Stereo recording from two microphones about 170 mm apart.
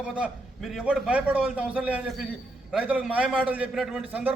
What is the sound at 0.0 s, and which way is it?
A man's voice, 5° right (ahead or behind).